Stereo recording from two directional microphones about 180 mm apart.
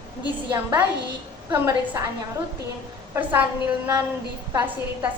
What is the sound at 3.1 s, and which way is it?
Speech, 10° right (ahead or behind).